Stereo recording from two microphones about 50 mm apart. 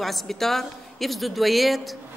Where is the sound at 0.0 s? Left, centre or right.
Centre.